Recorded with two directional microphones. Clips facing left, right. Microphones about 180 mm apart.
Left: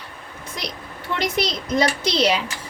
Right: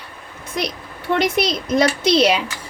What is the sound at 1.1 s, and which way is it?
Speech, 55° right (ahead or behind).